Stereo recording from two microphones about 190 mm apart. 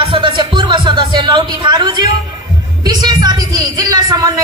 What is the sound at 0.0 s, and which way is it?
Music, 25° right (ahead or behind).